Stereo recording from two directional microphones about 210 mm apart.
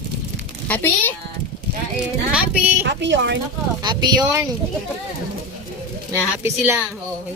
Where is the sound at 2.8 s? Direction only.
55° right (ahead or behind).